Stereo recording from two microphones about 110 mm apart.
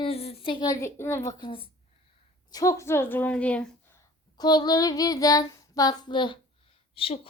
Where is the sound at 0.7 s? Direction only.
25° left (ahead or behind).